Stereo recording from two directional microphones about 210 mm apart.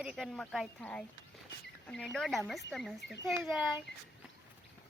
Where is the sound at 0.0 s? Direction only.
Centre (ahead or behind).